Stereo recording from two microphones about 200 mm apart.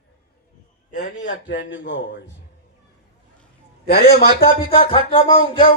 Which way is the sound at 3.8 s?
50° left (ahead or behind).